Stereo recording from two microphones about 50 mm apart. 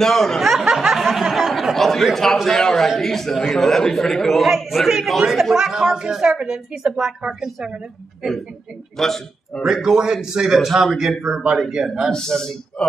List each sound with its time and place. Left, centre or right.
0.0 s a man's voice: centre
0.4 s snicker: centre
0.8 s a sound: centre
2.1 s a man's voice: centre
8.9 s a man's voice: centre
9.6 s a man's voice: centre
12.1 s a man's voice: centre